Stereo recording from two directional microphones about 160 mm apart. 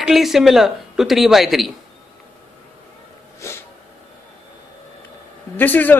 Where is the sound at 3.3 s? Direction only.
15° left (ahead or behind).